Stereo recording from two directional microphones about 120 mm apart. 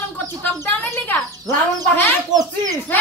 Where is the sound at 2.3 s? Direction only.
30° right (ahead or behind).